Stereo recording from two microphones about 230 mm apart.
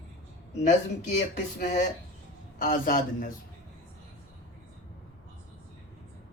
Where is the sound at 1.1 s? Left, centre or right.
Left.